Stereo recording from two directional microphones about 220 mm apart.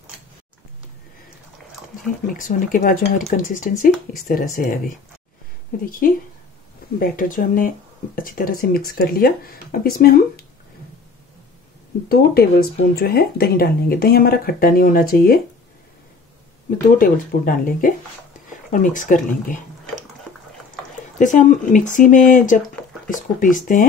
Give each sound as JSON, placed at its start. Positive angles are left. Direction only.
{"t": 2.2, "sound": "speech", "side_deg": 40}
{"t": 12.1, "sound": "speech", "side_deg": 45}
{"t": 17.0, "sound": "speech", "side_deg": 40}
{"t": 21.2, "sound": "speech", "side_deg": 35}